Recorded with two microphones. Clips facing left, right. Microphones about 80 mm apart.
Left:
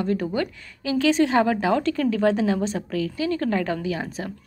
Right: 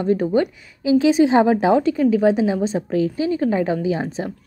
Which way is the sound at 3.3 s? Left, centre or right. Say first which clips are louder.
Right 4 dB; centre.